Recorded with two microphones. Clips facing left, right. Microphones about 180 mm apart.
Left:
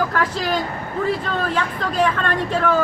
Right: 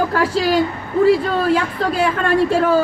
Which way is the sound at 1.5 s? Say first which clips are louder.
Right 6 dB; 10° right (ahead or behind).